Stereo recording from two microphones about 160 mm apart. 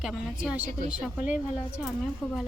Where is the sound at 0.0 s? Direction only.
5° right (ahead or behind).